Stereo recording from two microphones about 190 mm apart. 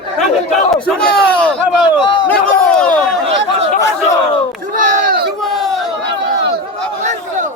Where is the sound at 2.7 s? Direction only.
5° left (ahead or behind).